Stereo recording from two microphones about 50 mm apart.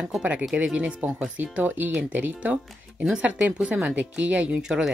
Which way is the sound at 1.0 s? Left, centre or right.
Right.